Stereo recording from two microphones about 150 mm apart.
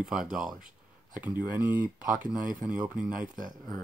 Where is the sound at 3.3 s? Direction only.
60° right (ahead or behind).